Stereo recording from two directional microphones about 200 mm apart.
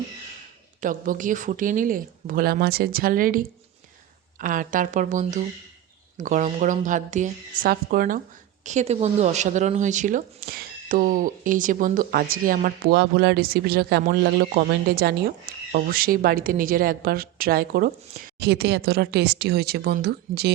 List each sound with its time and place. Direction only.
0.8 s speech: 40° right (ahead or behind)